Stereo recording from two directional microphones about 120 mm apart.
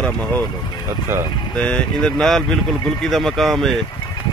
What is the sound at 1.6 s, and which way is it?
Speech, 10° left (ahead or behind).